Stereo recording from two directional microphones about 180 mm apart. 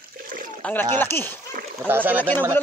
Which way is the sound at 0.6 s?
10° left (ahead or behind).